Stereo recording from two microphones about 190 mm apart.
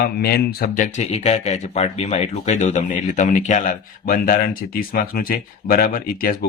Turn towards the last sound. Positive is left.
turn(degrees=50)  # may be behind; listen again after turning